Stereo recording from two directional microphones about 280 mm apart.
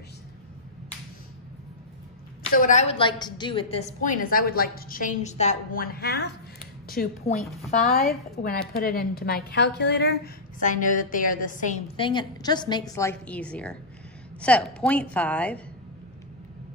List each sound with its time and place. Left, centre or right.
2.5 s a woman's voice: left
7.3 s a woman's voice: centre
7.8 s a woman's voice: left; by 15.6 s centre